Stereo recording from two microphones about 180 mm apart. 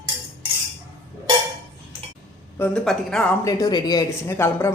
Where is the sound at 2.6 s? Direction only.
5° left (ahead or behind).